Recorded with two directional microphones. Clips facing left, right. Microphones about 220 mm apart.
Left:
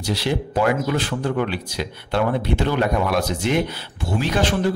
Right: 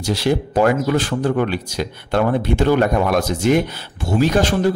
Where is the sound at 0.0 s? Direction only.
45° right (ahead or behind).